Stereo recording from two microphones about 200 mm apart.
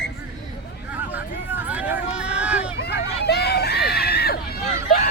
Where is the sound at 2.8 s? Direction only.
55° left (ahead or behind).